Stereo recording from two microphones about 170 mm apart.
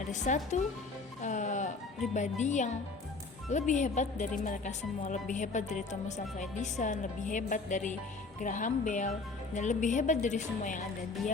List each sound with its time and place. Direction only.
0.0 s speech: 45° left (ahead or behind)
1.2 s music: 45° left (ahead or behind)
2.4 s a woman's voice: 45° left (ahead or behind)